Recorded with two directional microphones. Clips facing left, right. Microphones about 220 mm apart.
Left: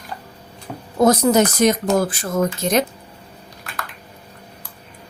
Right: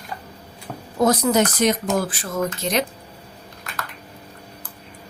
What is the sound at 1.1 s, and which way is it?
Speech, 45° left (ahead or behind).